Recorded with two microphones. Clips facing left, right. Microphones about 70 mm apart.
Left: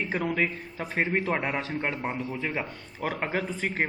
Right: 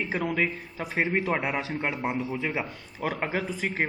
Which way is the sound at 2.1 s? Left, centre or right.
Centre.